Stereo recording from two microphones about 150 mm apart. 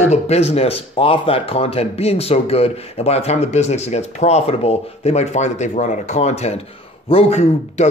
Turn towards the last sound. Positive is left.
turn(degrees=45)  # may be behind; listen again after turning